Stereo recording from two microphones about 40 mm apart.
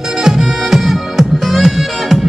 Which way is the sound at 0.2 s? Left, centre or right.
Centre.